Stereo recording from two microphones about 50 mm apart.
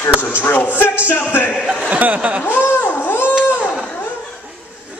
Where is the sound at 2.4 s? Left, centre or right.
Left.